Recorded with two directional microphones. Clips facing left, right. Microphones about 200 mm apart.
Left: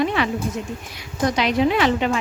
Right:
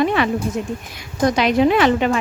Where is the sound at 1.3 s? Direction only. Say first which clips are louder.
Right 3 dB; 50° right (ahead or behind).